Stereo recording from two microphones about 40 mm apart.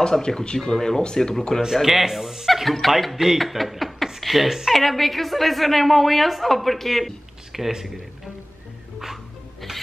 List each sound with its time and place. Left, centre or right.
0.2 s speech: centre
1.8 s a woman's voice: centre